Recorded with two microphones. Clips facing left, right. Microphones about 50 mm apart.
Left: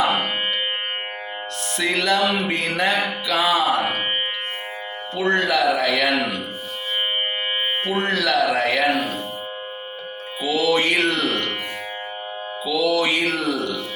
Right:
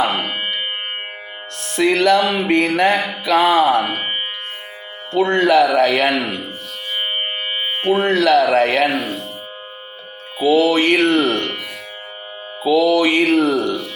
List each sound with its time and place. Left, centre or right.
1.7 s speech: right
3.2 s music: right
5.2 s speech: right
8.0 s speech: right
10.4 s speech: right
12.6 s speech: right